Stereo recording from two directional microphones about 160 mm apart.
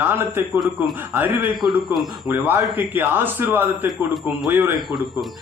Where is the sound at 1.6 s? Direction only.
15° right (ahead or behind).